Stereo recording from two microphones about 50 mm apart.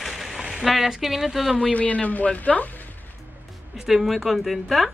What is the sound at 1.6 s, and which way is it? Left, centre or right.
Speech, left.